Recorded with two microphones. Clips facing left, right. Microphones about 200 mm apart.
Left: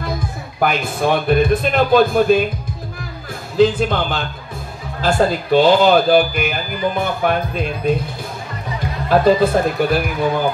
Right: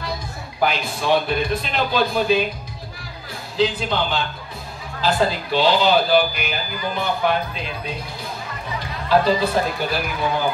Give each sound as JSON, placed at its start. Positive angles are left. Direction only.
{"t": 0.6, "sound": "speech", "side_deg": 50}
{"t": 3.5, "sound": "speech", "side_deg": 50}
{"t": 9.1, "sound": "speech", "side_deg": 50}